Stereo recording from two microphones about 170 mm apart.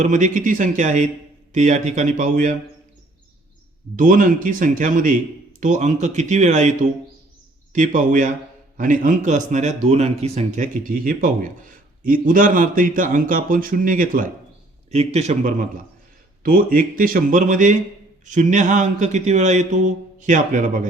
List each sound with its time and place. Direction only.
0.0 s speech: 45° right (ahead or behind)
3.9 s speech: 50° right (ahead or behind)
14.8 s a man's voice: 40° right (ahead or behind)
16.4 s speech: 55° right (ahead or behind)